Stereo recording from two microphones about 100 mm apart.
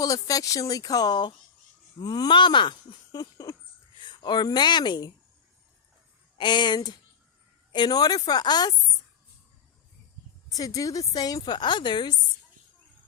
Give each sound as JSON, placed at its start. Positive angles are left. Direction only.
{"t": 0.0, "sound": "a woman's voice", "side_deg": 35}
{"t": 6.3, "sound": "speech", "side_deg": 50}
{"t": 10.5, "sound": "a woman's voice", "side_deg": 35}